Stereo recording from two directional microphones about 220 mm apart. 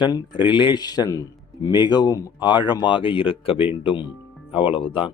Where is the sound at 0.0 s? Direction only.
20° left (ahead or behind).